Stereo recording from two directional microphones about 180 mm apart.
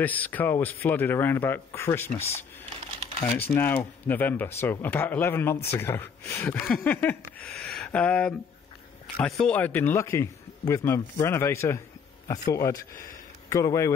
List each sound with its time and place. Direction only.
0.0 s speech: 10° left (ahead or behind)
3.3 s speech: 10° left (ahead or behind)